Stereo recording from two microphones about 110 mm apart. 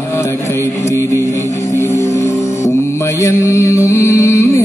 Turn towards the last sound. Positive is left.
turn(degrees=30)  # may be behind; listen again after turning